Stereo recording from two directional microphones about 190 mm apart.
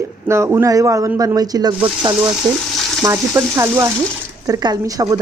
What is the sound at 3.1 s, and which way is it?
A woman's voice, 15° right (ahead or behind).